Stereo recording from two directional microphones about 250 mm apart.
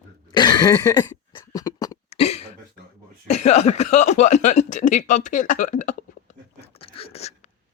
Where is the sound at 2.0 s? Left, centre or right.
Left.